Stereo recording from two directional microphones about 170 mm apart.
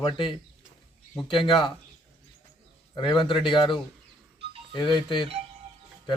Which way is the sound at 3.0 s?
30° left (ahead or behind).